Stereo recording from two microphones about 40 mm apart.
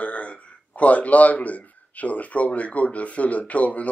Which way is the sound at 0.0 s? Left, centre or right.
Left.